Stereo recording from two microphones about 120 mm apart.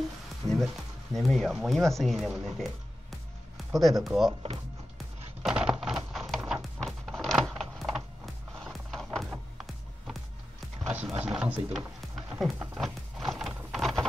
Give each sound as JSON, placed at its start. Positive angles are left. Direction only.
{"t": 0.4, "sound": "a sound", "side_deg": -30}
{"t": 1.1, "sound": "speech", "side_deg": 0}
{"t": 3.8, "sound": "speech", "side_deg": 0}
{"t": 4.9, "sound": "music", "side_deg": -5}
{"t": 10.9, "sound": "a sound", "side_deg": -10}
{"t": 12.8, "sound": "horse", "side_deg": 0}
{"t": 13.7, "sound": "rain", "side_deg": 0}